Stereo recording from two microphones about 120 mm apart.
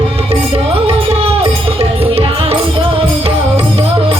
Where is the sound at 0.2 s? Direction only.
55° right (ahead or behind).